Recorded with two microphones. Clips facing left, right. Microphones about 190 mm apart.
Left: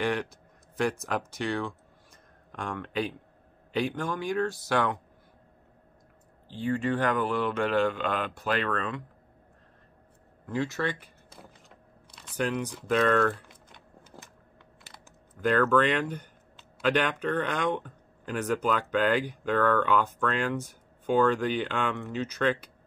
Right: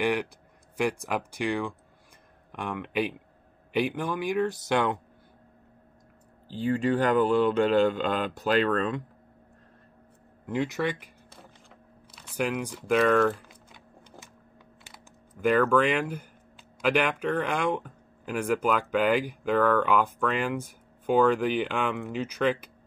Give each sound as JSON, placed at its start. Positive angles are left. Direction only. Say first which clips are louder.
{"t": 0.0, "sound": "speech", "louder": "right 2 dB", "side_deg": -10}
{"t": 6.5, "sound": "speech", "louder": "right 3 dB", "side_deg": -35}
{"t": 10.5, "sound": "speech", "louder": "right 2 dB", "side_deg": -15}
{"t": 11.7, "sound": "typing", "louder": "right 1 dB", "side_deg": -5}
{"t": 15.4, "sound": "speech", "louder": "right 1 dB", "side_deg": -10}